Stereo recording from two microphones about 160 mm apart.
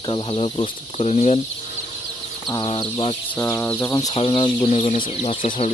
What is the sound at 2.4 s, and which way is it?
Speech, 30° left (ahead or behind).